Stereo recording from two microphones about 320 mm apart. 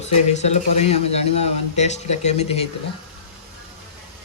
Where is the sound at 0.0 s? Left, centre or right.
Centre.